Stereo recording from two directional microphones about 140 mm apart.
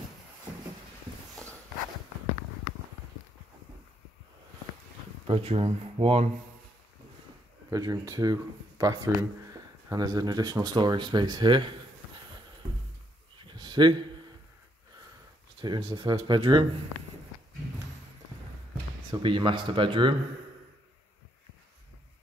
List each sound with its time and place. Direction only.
5.2 s speech: 40° right (ahead or behind)
7.7 s speech: 25° right (ahead or behind)
13.5 s a sound: 30° right (ahead or behind)
15.6 s speech: 30° right (ahead or behind)
19.0 s speech: 35° right (ahead or behind)